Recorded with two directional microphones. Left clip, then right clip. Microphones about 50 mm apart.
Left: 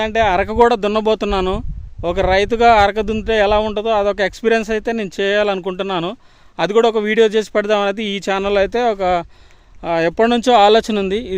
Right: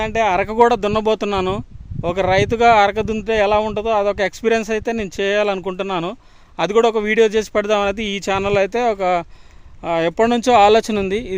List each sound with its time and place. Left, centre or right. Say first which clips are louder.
0.0 s a man's voice: left 2 dB; left
9.8 s speech: left 2 dB; left